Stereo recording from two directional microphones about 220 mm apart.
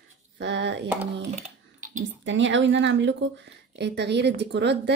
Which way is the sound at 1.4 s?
35° right (ahead or behind).